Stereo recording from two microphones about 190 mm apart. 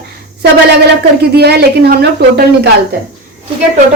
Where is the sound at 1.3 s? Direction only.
60° right (ahead or behind).